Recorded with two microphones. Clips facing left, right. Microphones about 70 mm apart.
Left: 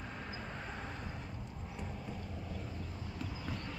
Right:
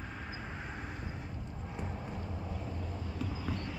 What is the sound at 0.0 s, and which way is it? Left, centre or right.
Vehicle, centre.